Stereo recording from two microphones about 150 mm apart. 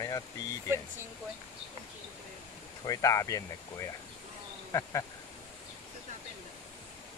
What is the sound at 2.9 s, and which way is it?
Speech, 25° left (ahead or behind).